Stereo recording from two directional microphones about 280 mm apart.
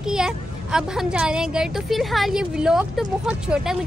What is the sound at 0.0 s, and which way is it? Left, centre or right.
Speech, centre.